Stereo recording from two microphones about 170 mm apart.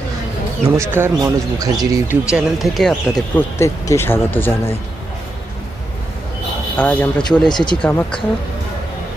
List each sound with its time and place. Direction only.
0.7 s speech: 15° right (ahead or behind)
2.3 s speech: centre (ahead or behind)
6.8 s speech: 10° left (ahead or behind)
7.2 s speech: 25° left (ahead or behind)
7.8 s speech: 5° left (ahead or behind)